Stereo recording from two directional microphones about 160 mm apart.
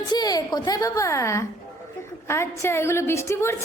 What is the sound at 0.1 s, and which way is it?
A woman's voice, 25° left (ahead or behind).